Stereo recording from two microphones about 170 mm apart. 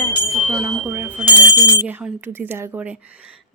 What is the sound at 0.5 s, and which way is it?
Speech, 15° right (ahead or behind).